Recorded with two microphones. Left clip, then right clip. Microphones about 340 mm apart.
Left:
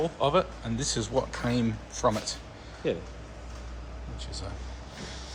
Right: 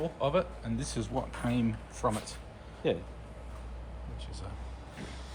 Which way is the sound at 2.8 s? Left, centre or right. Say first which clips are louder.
Left 1 dB; right.